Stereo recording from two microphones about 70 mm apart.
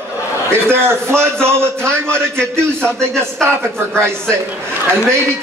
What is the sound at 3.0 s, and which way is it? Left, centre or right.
Speech, centre.